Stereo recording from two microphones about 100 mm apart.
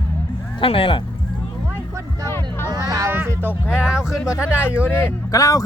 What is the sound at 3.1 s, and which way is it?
Music, 20° right (ahead or behind).